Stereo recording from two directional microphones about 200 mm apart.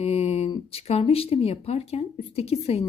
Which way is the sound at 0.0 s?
30° left (ahead or behind).